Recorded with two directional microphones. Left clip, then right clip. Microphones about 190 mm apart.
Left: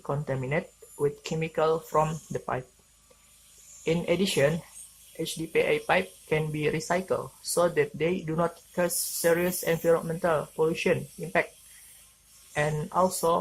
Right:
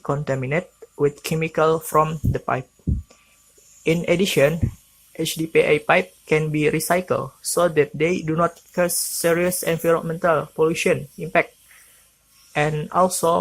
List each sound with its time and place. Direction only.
0.0 s speech: 25° right (ahead or behind)
3.8 s speech: 25° right (ahead or behind)
12.5 s speech: 25° right (ahead or behind)